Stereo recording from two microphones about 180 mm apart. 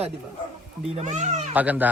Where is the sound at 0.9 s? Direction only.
40° right (ahead or behind).